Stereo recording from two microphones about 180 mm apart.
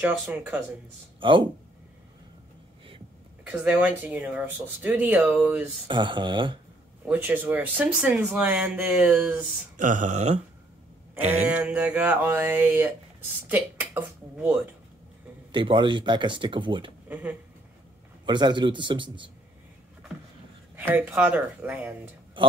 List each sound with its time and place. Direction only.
0.0 s speech: 10° right (ahead or behind)
1.2 s speech: 25° right (ahead or behind)
3.4 s speech: 5° right (ahead or behind)
5.9 s speech: 25° right (ahead or behind)
7.1 s speech: 10° right (ahead or behind)
9.8 s a sound: 45° right (ahead or behind)
11.4 s speech: 10° right (ahead or behind)
15.5 s speech: 25° right (ahead or behind)
17.1 s speech: 10° right (ahead or behind)
18.2 s speech: 25° right (ahead or behind)
20.7 s speech: 10° right (ahead or behind)